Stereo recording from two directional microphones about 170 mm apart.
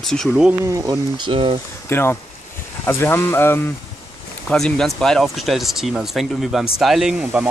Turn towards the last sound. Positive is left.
turn(degrees=-5)  # may be behind; listen again after turning